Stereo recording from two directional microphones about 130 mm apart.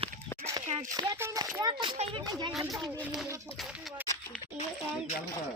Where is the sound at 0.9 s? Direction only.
25° right (ahead or behind).